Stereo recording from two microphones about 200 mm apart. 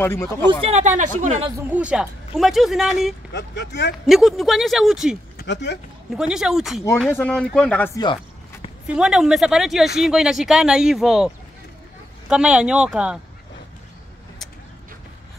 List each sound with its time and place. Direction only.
0.0 s speech: 10° left (ahead or behind)
0.6 s speech: 30° right (ahead or behind)
1.7 s speech: 5° right (ahead or behind)
3.3 s speech: 60° left (ahead or behind)
4.1 s speech: centre (ahead or behind)
5.4 s speech: 60° left (ahead or behind)
6.1 s speech: 5° right (ahead or behind)
8.8 s speech: 5° right (ahead or behind)